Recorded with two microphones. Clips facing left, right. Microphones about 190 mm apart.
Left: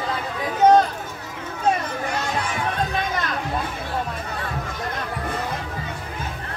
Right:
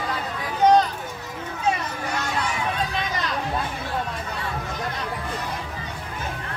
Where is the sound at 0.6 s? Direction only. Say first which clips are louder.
Left 2 dB; 50° left (ahead or behind).